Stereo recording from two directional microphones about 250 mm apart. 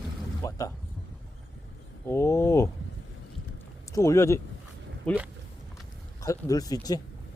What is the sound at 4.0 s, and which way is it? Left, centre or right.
Speech, centre.